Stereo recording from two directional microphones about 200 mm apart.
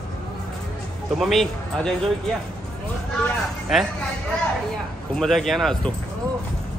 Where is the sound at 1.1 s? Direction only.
Centre (ahead or behind).